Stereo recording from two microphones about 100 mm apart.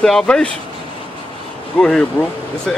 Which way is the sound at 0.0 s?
5° left (ahead or behind).